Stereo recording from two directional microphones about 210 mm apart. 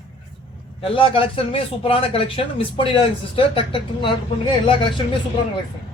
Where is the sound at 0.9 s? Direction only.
25° left (ahead or behind).